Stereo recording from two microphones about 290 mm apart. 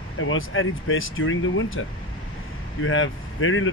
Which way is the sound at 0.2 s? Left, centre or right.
Left.